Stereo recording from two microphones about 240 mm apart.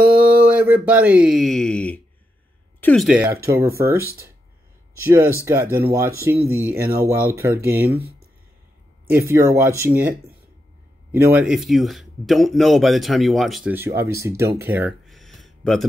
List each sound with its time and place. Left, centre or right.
0.0 s a sound: right
0.5 s speech: centre
6.8 s speech: right
7.1 s speech: centre
9.1 s speech: centre
14.6 s a sound: centre